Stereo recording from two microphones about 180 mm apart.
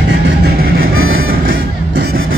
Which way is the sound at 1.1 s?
55° right (ahead or behind).